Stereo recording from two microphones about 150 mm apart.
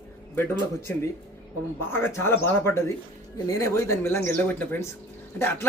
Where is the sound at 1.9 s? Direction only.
15° left (ahead or behind).